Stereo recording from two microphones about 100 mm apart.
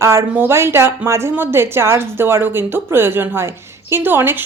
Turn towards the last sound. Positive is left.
turn(degrees=-20)  # may be behind; listen again after turning